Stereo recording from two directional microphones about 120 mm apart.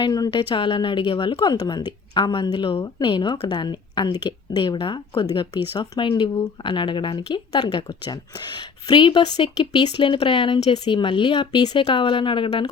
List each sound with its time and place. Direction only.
0.0 s speech: 35° left (ahead or behind)
1.4 s speech: 35° left (ahead or behind)